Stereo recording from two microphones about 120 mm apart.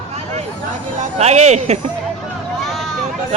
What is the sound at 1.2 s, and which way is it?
Speech, 65° right (ahead or behind).